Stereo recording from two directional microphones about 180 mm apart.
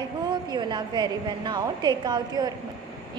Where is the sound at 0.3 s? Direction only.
25° right (ahead or behind).